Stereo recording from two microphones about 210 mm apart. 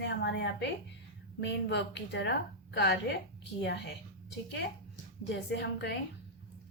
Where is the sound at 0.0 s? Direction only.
55° left (ahead or behind).